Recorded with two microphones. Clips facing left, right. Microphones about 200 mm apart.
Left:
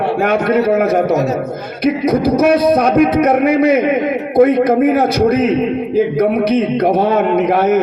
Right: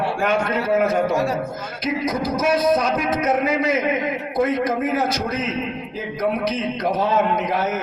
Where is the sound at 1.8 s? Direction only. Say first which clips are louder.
Left 10 dB; 60° left (ahead or behind).